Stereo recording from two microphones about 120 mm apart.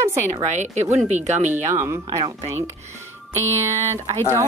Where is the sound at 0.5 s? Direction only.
85° right.